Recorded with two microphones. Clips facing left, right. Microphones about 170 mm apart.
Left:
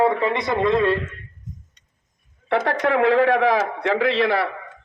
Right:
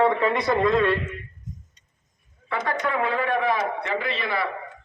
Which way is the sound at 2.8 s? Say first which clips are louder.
Left 10 dB; 90° left.